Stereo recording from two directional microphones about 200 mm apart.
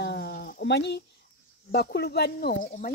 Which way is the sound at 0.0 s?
55° left (ahead or behind).